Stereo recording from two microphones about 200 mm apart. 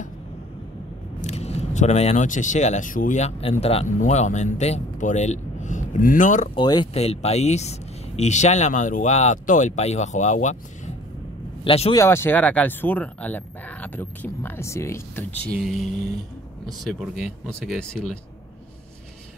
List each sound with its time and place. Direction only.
1.2 s speech: 30° left (ahead or behind)
6.5 s speech: 20° left (ahead or behind); by 10.6 s 35° left (ahead or behind)
11.6 s speech: 30° left (ahead or behind)
12.0 s speech: 10° left (ahead or behind)
15.6 s speech: centre (ahead or behind)